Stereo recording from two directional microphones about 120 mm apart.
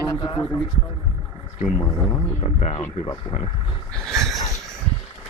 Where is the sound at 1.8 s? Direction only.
25° left (ahead or behind).